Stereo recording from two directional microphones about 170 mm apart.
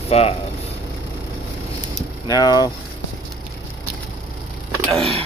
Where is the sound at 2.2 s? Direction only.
20° left (ahead or behind).